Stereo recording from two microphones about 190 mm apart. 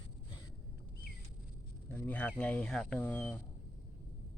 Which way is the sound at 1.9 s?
10° left (ahead or behind).